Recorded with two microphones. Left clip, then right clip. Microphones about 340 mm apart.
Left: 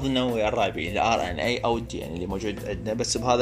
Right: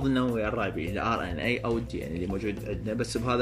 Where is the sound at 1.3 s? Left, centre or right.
Left.